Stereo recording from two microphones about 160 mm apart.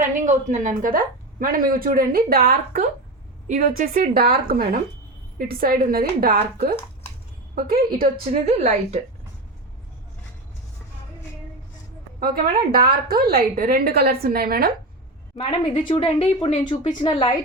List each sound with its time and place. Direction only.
0.0 s speech: 50° right (ahead or behind)
3.4 s a woman's voice: 55° right (ahead or behind)
8.3 s a woman's voice: 40° right (ahead or behind)
12.7 s a woman's voice: 70° right (ahead or behind)
15.4 s a woman's voice: 35° left (ahead or behind)